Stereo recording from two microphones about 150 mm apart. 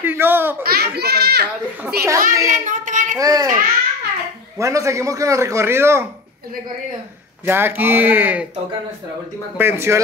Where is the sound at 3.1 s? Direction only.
25° right (ahead or behind).